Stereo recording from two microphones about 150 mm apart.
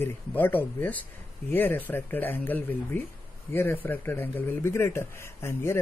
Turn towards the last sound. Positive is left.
turn(degrees=15)  # may be behind; listen again after turning